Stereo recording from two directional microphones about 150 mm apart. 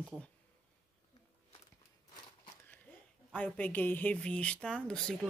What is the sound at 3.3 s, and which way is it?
Speech, 10° left (ahead or behind).